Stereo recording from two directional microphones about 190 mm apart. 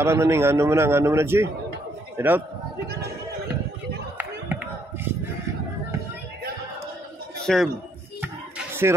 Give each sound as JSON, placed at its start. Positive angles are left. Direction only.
{"t": 0.0, "sound": "a man's voice", "side_deg": -15}
{"t": 4.2, "sound": "a sound", "side_deg": -10}
{"t": 7.4, "sound": "speech", "side_deg": 0}
{"t": 8.2, "sound": "music", "side_deg": -10}